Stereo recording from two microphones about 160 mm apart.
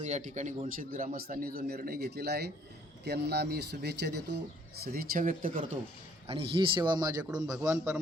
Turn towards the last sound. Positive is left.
turn(degrees=-15)  # may be behind; listen again after turning